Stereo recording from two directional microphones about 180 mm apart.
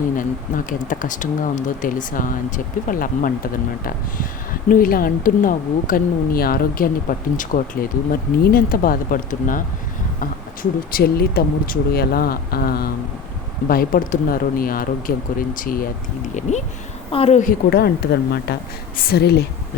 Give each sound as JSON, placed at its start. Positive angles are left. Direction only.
{"t": 0.2, "sound": "a woman's voice", "side_deg": 45}
{"t": 17.7, "sound": "speech", "side_deg": 60}